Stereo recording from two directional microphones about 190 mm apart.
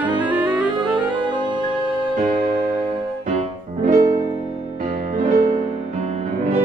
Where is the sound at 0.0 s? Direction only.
10° right (ahead or behind).